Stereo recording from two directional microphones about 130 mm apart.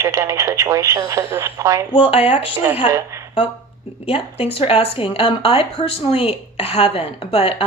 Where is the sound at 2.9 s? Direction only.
25° right (ahead or behind).